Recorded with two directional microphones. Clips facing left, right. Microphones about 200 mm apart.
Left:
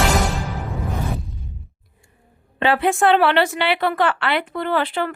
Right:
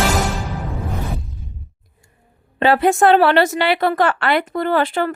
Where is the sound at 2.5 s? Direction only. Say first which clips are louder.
Right 4 dB; 40° right (ahead or behind).